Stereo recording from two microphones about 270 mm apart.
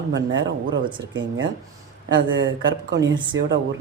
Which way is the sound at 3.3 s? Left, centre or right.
Right.